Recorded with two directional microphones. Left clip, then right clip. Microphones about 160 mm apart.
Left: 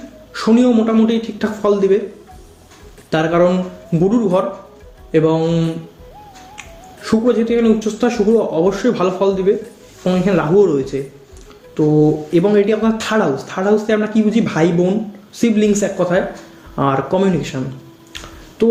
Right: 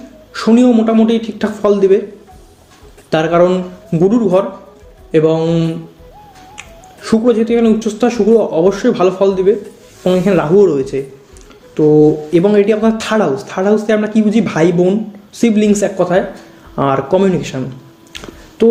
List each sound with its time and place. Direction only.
0.3 s speech: 40° right (ahead or behind)
3.1 s speech: 40° right (ahead or behind)
18.1 s a sound: 40° right (ahead or behind)